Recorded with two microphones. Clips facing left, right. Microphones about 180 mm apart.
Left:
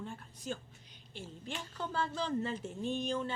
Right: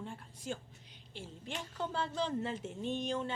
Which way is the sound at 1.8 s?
20° right (ahead or behind).